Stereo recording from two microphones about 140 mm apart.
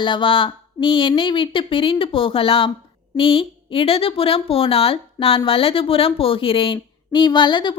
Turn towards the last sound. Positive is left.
turn(degrees=35)  # may be behind; listen again after turning